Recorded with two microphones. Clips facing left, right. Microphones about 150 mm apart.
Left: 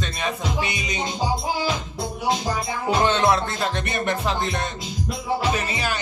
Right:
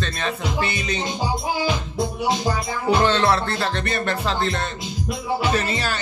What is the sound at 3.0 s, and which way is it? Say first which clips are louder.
Speech: right 1 dB; 15° left (ahead or behind).